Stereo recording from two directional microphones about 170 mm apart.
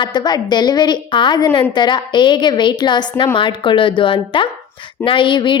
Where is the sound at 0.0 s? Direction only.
25° left (ahead or behind).